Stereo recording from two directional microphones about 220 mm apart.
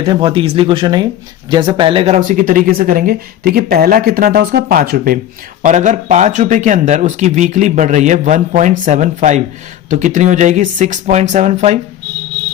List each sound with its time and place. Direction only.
0.0 s speech: 25° right (ahead or behind)